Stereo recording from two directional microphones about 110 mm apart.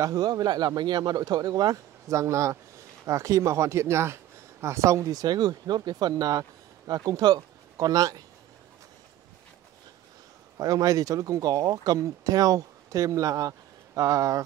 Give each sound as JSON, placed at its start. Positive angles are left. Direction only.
{"t": 0.0, "sound": "speech", "side_deg": -35}
{"t": 10.6, "sound": "speech", "side_deg": -35}